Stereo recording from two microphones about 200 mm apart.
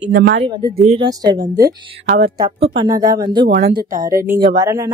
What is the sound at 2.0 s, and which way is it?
Speech, 35° right (ahead or behind).